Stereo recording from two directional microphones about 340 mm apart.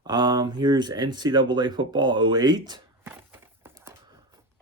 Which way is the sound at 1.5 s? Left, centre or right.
Centre.